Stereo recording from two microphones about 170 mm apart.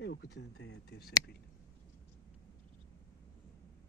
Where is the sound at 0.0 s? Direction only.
85° left.